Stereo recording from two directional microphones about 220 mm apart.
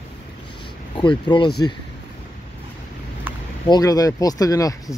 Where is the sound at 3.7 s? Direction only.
15° left (ahead or behind).